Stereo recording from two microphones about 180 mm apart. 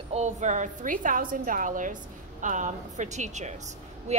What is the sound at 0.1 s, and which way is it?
A woman's voice, 40° right (ahead or behind).